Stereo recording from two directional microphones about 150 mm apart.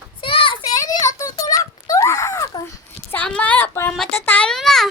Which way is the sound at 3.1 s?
10° left (ahead or behind).